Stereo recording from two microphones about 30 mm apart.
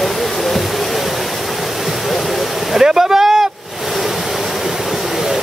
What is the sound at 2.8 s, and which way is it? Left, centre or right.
Vehicle, right.